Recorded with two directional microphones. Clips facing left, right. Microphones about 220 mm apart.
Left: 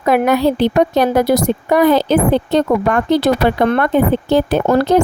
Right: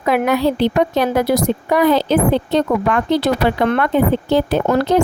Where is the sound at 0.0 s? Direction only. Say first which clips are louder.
Left 3 dB; 45° left (ahead or behind).